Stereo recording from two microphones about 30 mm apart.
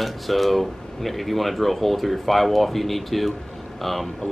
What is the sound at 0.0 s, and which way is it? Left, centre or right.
Speech, centre.